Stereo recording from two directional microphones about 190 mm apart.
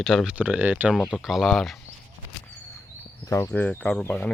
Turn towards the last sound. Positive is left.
turn(degrees=5)  # may be behind; listen again after turning